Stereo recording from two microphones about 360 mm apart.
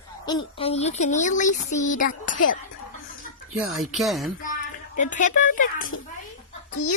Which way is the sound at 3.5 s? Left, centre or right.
Centre.